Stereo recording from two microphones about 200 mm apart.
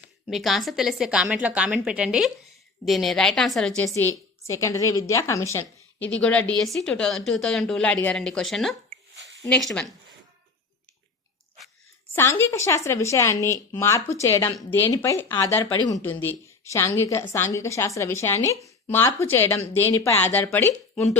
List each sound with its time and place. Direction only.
0.3 s a woman's voice: centre (ahead or behind)
12.1 s speech: 15° left (ahead or behind)
16.0 s speech: 10° left (ahead or behind)